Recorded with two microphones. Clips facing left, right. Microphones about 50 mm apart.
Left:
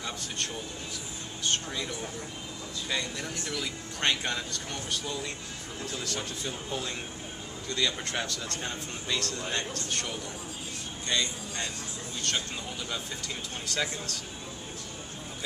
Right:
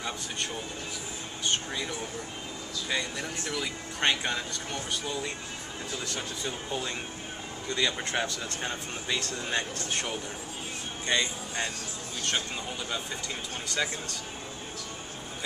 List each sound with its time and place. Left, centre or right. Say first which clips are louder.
1.4 s speech: right 1 dB; centre
2.9 s speech: right 1 dB; centre
13.7 s speech: right 1 dB; centre